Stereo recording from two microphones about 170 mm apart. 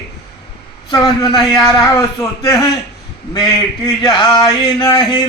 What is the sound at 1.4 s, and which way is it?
Speech, centre (ahead or behind).